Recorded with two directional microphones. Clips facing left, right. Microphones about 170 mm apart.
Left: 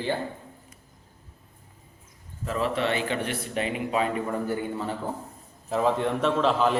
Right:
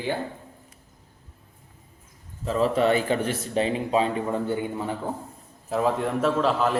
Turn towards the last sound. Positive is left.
turn(degrees=0)  # may be behind; listen again after turning